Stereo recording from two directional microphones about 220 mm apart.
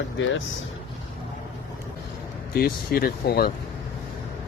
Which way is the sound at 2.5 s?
45° left (ahead or behind).